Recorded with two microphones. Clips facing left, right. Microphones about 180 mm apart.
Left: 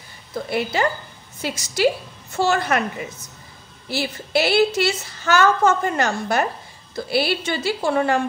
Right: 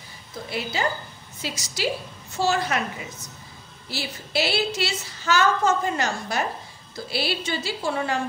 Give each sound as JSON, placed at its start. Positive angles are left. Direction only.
{"t": 0.5, "sound": "a woman's voice", "side_deg": 60}
{"t": 3.9, "sound": "a woman's voice", "side_deg": 55}